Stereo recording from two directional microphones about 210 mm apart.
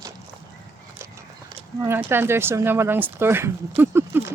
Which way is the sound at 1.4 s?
10° right (ahead or behind).